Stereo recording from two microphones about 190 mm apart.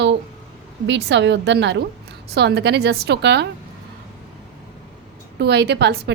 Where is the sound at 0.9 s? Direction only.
65° right (ahead or behind).